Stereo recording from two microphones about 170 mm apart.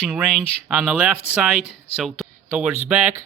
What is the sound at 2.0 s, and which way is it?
Speech, centre (ahead or behind).